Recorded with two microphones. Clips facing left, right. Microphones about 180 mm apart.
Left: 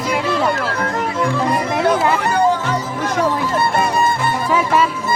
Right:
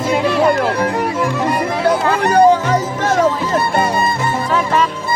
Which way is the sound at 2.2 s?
40° right (ahead or behind).